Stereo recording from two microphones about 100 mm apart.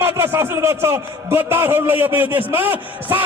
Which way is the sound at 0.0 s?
25° right (ahead or behind).